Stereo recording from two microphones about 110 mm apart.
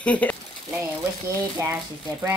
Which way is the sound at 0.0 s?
15° left (ahead or behind).